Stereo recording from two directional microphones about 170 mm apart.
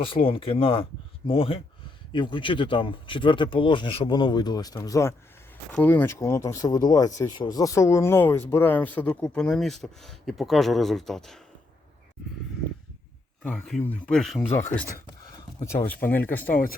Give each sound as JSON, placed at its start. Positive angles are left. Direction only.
{"t": 0.0, "sound": "speech", "side_deg": 30}
{"t": 13.4, "sound": "speech", "side_deg": 5}
{"t": 15.2, "sound": "a sound", "side_deg": 25}
{"t": 16.3, "sound": "speech", "side_deg": 10}